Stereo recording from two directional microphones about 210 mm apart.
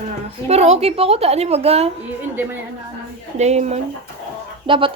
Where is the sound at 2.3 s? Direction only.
10° right (ahead or behind).